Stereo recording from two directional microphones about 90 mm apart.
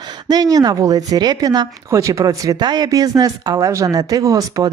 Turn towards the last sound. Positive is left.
turn(degrees=-40)  # may be behind; listen again after turning